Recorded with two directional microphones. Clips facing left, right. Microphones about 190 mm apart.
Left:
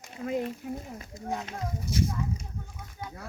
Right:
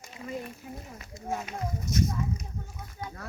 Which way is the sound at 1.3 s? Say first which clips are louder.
Right 1 dB; 15° right (ahead or behind).